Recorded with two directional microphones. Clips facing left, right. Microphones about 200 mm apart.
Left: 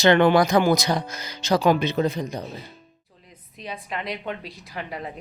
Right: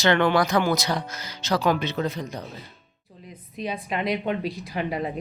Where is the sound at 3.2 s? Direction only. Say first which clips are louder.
Right 7 dB; 15° right (ahead or behind).